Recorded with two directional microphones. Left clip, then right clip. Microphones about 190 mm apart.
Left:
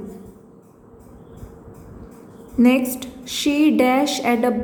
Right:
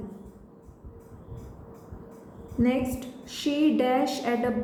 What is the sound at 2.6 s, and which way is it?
A woman's voice, 40° left (ahead or behind).